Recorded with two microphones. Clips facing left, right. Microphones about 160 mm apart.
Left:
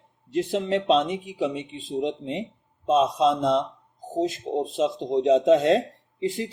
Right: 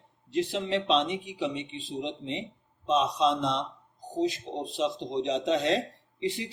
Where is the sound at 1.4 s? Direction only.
45° left (ahead or behind).